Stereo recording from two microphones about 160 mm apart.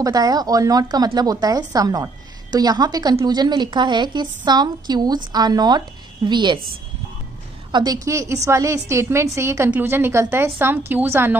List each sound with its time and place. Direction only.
0.0 s a woman's voice: 25° right (ahead or behind)
7.7 s a woman's voice: 25° right (ahead or behind)